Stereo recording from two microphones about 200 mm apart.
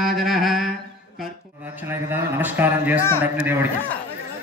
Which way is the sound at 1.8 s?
10° right (ahead or behind).